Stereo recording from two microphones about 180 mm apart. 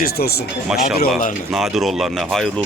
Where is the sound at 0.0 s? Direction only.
60° left (ahead or behind).